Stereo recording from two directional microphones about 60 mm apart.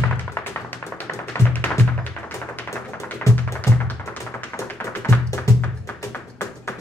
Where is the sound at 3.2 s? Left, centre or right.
Left.